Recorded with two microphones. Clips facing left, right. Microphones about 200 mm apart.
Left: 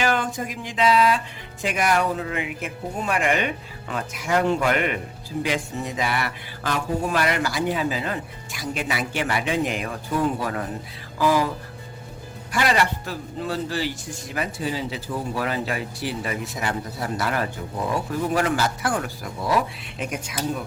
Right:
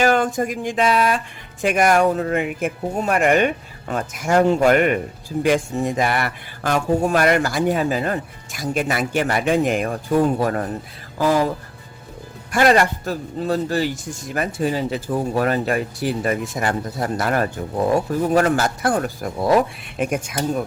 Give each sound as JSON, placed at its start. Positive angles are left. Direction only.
{"t": 0.0, "sound": "speech", "side_deg": -45}
{"t": 12.5, "sound": "speech", "side_deg": -50}